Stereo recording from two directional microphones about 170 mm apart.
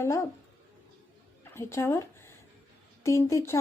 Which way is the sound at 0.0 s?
15° left (ahead or behind).